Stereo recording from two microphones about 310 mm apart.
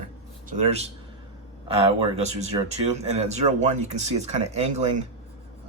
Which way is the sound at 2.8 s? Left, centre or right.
Right.